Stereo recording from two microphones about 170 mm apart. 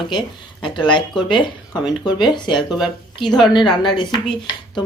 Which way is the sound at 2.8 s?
Centre (ahead or behind).